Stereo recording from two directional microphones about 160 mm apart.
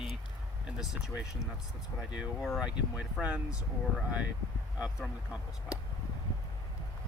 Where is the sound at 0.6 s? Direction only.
5° right (ahead or behind).